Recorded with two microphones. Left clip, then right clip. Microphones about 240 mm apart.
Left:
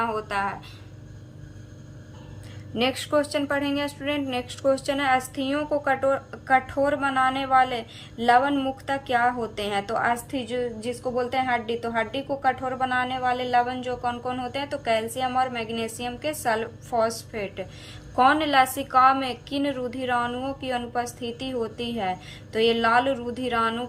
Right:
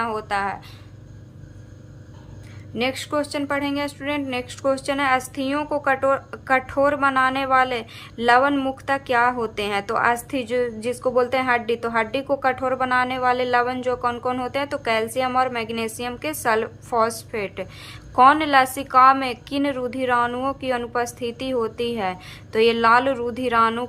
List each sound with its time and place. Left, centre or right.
0.0 s a woman's voice: centre
2.7 s speech: centre